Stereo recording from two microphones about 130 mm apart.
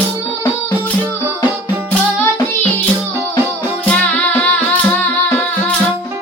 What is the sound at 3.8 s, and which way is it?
Music, 10° left (ahead or behind).